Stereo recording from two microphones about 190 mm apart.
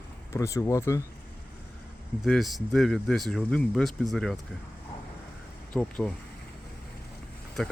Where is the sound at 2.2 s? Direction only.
Centre (ahead or behind).